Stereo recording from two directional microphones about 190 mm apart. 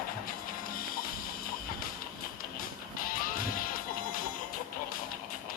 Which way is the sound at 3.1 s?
50° left (ahead or behind).